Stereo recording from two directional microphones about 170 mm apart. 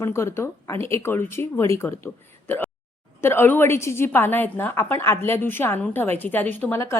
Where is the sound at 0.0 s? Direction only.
15° left (ahead or behind).